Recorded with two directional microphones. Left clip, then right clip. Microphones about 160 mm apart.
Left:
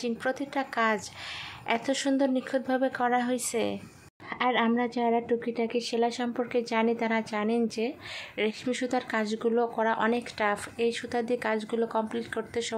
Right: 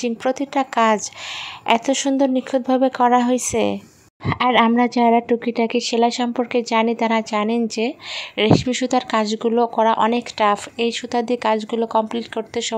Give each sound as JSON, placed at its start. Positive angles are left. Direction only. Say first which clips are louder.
{"t": 0.0, "sound": "speech", "louder": "right 9 dB", "side_deg": -35}